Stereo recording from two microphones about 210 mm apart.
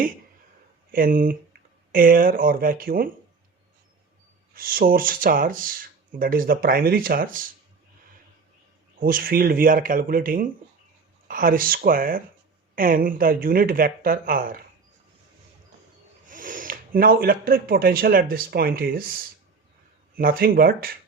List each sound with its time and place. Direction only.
0.9 s speech: 40° right (ahead or behind)
4.5 s speech: 45° right (ahead or behind)
9.0 s speech: 40° right (ahead or behind)
16.2 s speech: 40° right (ahead or behind)
20.1 s speech: 45° right (ahead or behind)